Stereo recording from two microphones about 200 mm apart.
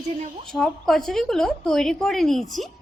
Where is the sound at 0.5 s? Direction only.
Centre (ahead or behind).